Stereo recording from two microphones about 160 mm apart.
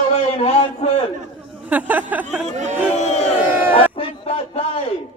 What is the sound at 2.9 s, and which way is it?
A man's voice, 45° left (ahead or behind).